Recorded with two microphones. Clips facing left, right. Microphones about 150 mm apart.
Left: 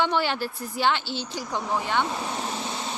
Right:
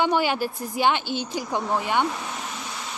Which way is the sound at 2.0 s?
30° left (ahead or behind).